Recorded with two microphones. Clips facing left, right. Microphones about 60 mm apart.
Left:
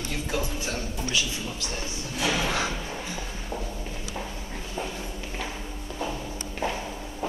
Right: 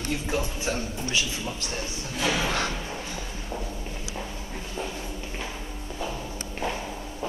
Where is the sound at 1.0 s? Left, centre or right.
Right.